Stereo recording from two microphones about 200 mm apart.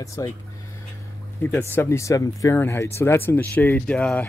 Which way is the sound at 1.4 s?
10° left (ahead or behind).